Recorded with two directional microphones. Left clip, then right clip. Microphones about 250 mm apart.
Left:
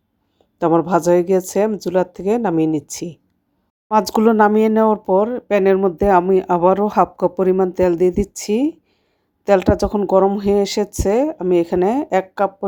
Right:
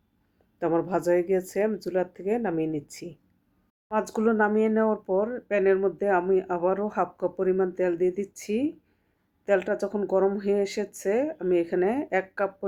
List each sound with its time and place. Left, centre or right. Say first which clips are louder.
0.6 s speech: left 10 dB; left